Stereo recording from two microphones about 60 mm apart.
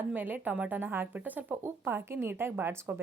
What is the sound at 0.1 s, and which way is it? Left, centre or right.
A woman's voice, right.